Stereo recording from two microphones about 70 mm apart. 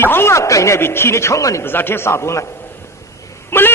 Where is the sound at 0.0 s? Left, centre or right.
Left.